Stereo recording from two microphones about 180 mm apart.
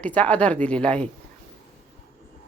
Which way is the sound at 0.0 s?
10° left (ahead or behind).